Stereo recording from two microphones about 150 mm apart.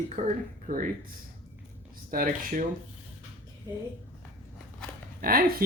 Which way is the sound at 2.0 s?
70° right (ahead or behind).